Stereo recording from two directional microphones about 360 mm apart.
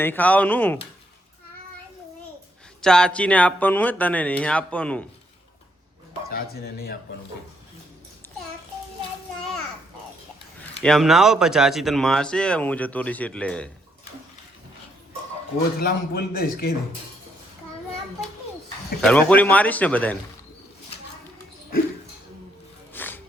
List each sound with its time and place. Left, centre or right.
0.0 s speech: centre
2.8 s speech: centre
6.2 s a man's voice: left
10.8 s speech: centre
15.8 s a man's voice: left
19.0 s speech: centre
22.9 s music: centre